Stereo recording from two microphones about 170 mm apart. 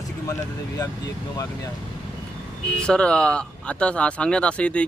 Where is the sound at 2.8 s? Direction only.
5° left (ahead or behind).